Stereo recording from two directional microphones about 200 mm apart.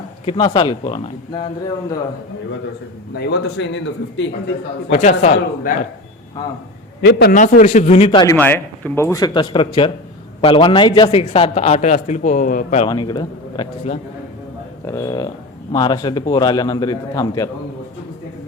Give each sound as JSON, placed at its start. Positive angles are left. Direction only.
{"t": 0.3, "sound": "a man's voice", "side_deg": 25}
{"t": 3.2, "sound": "speech", "side_deg": 55}
{"t": 4.9, "sound": "a man's voice", "side_deg": 35}
{"t": 7.0, "sound": "a man's voice", "side_deg": 55}
{"t": 7.3, "sound": "a man's voice", "side_deg": 40}
{"t": 8.4, "sound": "a man's voice", "side_deg": 10}
{"t": 12.8, "sound": "a man's voice", "side_deg": 25}